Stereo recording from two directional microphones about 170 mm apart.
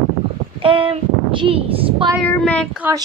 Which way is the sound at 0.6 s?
30° right (ahead or behind).